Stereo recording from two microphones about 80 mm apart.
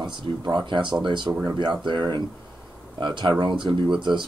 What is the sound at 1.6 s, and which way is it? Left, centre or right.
Speech, right.